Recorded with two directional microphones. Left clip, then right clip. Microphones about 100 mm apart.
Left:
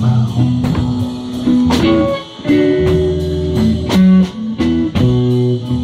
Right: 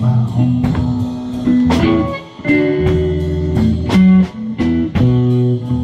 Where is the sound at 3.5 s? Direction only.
15° right (ahead or behind).